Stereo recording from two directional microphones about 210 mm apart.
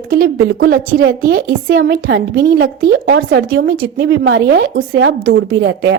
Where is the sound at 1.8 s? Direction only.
55° right (ahead or behind).